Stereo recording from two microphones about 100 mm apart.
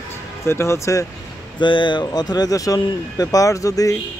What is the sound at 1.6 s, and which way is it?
Speech, 55° left (ahead or behind).